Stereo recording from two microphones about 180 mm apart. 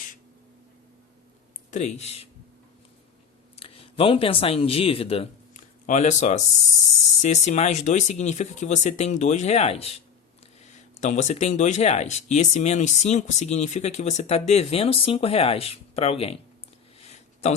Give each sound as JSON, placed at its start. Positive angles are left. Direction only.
{"t": 1.7, "sound": "speech", "side_deg": 40}
{"t": 3.5, "sound": "speech", "side_deg": 30}
{"t": 17.0, "sound": "a sound", "side_deg": 35}